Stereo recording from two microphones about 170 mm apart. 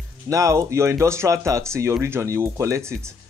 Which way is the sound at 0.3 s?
20° right (ahead or behind).